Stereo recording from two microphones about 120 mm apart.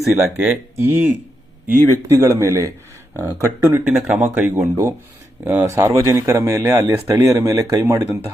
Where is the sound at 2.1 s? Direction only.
25° right (ahead or behind).